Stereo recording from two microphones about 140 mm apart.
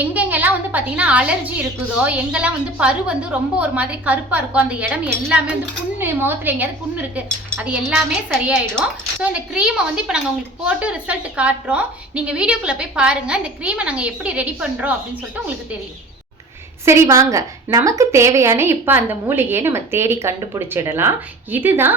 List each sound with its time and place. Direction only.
0.0 s a woman's voice: 10° right (ahead or behind)
8.3 s a woman's voice: centre (ahead or behind)
16.8 s a woman's voice: 20° right (ahead or behind)